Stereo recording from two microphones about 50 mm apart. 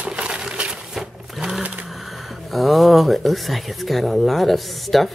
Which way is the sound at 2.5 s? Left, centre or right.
Centre.